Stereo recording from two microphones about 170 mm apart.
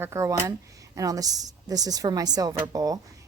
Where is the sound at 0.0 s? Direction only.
15° right (ahead or behind).